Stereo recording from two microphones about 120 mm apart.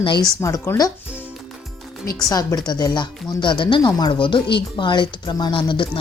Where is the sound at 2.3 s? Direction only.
35° left (ahead or behind).